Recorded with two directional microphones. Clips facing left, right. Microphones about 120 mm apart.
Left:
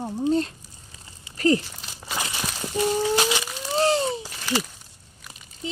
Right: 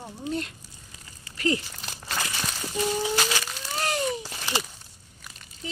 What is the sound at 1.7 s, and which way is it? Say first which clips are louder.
Crumpling: left 1 dB; 15° left (ahead or behind).